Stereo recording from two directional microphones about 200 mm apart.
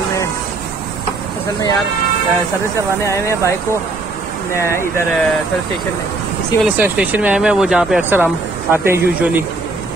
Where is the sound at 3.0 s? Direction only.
15° left (ahead or behind).